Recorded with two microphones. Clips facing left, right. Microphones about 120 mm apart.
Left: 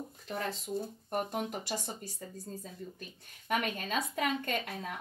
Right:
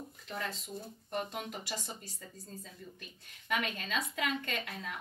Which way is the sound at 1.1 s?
45° left (ahead or behind).